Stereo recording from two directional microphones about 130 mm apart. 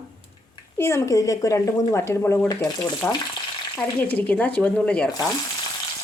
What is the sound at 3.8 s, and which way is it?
A woman's voice, 15° left (ahead or behind).